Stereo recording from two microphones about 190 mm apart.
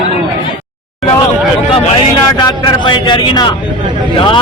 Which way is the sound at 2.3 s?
25° left (ahead or behind).